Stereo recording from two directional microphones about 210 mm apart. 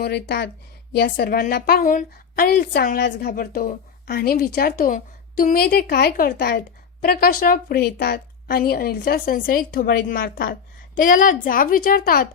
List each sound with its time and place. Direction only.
0.0 s a woman's voice: 50° left (ahead or behind)